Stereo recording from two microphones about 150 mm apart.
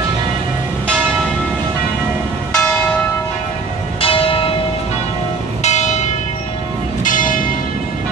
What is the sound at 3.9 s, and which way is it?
Church bell, 35° left (ahead or behind).